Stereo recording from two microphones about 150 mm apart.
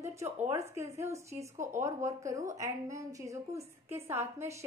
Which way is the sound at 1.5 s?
55° right (ahead or behind).